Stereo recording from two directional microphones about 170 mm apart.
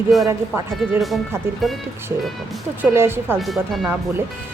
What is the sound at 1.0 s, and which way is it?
Speech, centre (ahead or behind).